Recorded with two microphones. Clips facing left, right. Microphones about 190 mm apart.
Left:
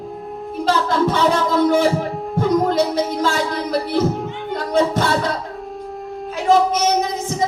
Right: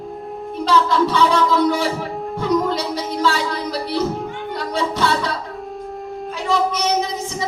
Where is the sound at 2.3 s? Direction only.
50° left (ahead or behind).